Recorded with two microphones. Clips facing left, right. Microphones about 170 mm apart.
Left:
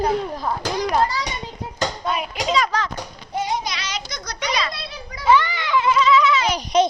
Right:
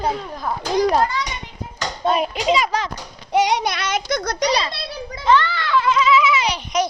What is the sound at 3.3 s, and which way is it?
A child's voice, 80° right.